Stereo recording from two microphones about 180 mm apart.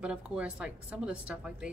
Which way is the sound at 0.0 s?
5° right (ahead or behind).